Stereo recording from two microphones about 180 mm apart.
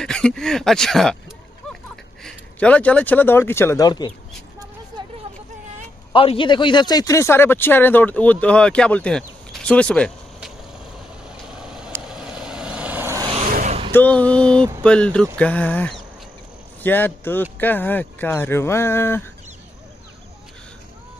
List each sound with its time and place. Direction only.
0.0 s speech: 5° left (ahead or behind)
2.2 s speech: 5° left (ahead or behind); by 4.1 s 20° left (ahead or behind)
6.1 s speech: 30° left (ahead or behind); by 9.2 s 5° left (ahead or behind)
9.5 s a sound: 5° left (ahead or behind)
11.6 s vehicle: 5° right (ahead or behind)
13.5 s vehicle: 40° right (ahead or behind)
13.9 s speech: 10° left (ahead or behind)